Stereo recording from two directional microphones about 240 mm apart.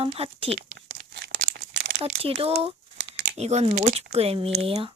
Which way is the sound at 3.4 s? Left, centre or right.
Right.